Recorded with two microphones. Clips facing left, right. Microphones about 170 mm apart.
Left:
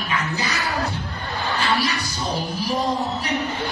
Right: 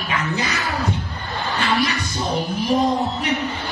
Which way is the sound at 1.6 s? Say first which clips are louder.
Right 2 dB; 35° left (ahead or behind).